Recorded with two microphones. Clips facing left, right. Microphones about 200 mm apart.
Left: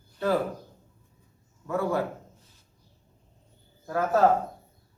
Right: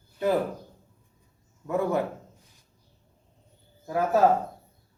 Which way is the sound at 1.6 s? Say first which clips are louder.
Right 1 dB; 20° right (ahead or behind).